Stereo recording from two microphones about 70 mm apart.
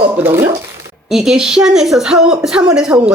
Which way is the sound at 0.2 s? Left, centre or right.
Right.